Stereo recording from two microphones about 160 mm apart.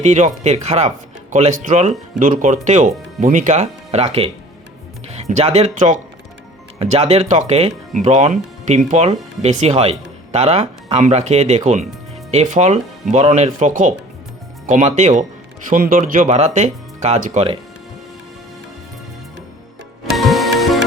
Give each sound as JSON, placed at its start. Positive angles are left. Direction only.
{"t": 0.0, "sound": "speech", "side_deg": -45}
{"t": 5.3, "sound": "speech", "side_deg": -40}
{"t": 20.1, "sound": "music", "side_deg": 0}